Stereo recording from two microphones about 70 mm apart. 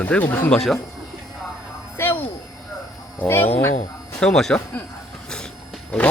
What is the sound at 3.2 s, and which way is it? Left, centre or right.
Speech, left.